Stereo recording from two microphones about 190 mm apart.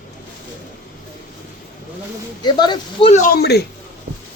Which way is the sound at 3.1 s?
45° left (ahead or behind).